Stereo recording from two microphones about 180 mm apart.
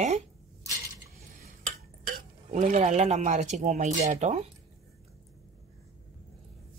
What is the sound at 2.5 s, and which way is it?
Speech, 40° right (ahead or behind).